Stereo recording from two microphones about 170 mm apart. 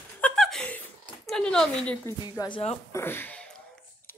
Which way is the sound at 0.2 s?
5° left (ahead or behind).